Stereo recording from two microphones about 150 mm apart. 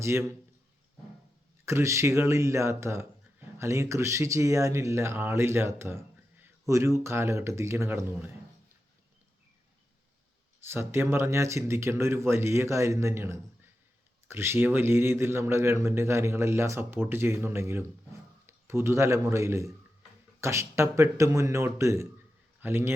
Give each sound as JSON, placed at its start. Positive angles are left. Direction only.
{"t": 0.0, "sound": "a man's voice", "side_deg": -20}
{"t": 1.6, "sound": "speech", "side_deg": -20}
{"t": 10.6, "sound": "a man's voice", "side_deg": -15}